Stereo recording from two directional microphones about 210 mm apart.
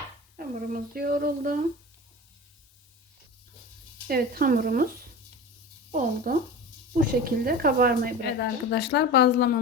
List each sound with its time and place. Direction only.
0.3 s speech: 45° right (ahead or behind)
4.0 s speech: 45° right (ahead or behind)
5.9 s speech: 40° right (ahead or behind)
8.2 s a woman's voice: 55° left (ahead or behind)